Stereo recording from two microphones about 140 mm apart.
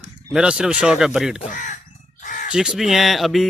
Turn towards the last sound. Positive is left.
turn(degrees=0)  # may be behind; listen again after turning